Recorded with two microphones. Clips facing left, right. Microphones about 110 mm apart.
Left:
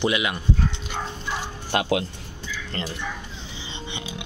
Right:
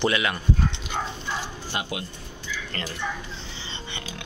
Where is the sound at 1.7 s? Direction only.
90° left.